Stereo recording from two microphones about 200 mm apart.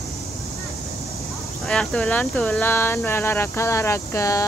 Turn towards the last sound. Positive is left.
turn(degrees=15)  # may be behind; listen again after turning